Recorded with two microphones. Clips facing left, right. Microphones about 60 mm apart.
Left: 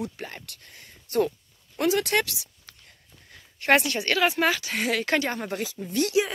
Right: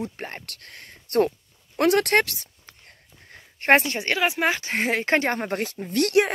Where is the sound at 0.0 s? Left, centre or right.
Right.